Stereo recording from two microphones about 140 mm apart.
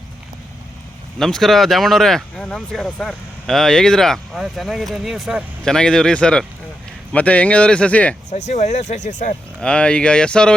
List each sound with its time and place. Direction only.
1.2 s speech: centre (ahead or behind)
8.3 s speech: 55° left (ahead or behind)
9.6 s speech: 5° left (ahead or behind)